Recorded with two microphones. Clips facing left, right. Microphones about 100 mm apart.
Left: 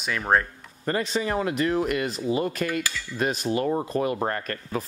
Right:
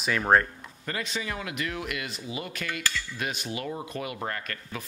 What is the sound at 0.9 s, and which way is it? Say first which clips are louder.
Speech: left 8 dB; 35° left (ahead or behind).